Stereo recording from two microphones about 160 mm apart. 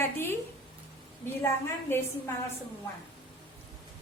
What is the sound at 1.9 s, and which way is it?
Speech, 15° left (ahead or behind).